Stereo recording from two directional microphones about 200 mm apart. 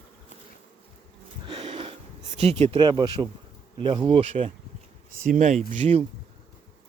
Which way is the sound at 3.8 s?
25° right (ahead or behind).